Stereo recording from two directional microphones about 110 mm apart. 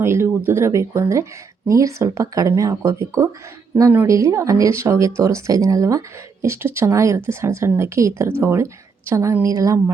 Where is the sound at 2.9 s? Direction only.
25° right (ahead or behind).